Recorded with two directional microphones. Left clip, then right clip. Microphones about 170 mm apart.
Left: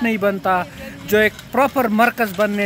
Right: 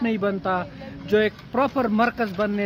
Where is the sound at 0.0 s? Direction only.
10° left (ahead or behind).